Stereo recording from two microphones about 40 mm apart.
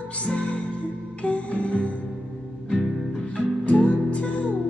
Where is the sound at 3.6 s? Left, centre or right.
Left.